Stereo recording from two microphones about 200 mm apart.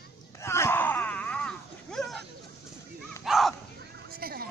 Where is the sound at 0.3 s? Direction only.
15° left (ahead or behind).